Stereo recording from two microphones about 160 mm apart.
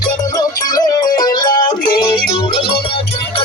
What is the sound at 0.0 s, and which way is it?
Music, 25° left (ahead or behind).